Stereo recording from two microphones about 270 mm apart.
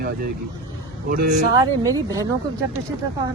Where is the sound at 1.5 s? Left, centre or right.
Centre.